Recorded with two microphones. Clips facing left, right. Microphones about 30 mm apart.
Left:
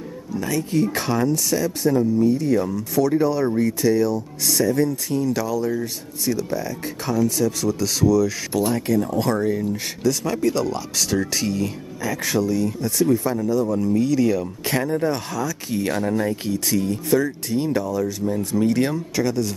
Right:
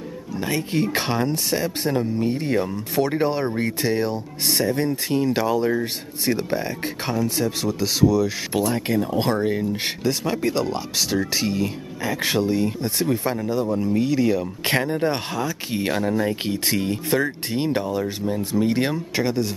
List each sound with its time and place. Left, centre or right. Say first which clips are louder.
0.4 s speech: left 2 dB; right
13.7 s speech: left 1 dB; right
14.7 s speech: even; right
16.0 s speech: right 1 dB; centre
16.4 s speech: left 1 dB; right
18.2 s speech: left 1 dB; right